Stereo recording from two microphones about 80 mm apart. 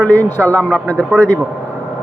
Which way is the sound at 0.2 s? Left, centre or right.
Left.